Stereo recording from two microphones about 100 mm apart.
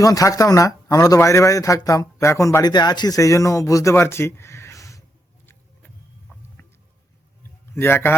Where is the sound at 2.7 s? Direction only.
45° left (ahead or behind); by 5.0 s 30° left (ahead or behind).